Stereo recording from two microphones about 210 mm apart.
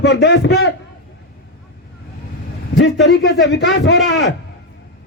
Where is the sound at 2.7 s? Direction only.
55° left (ahead or behind).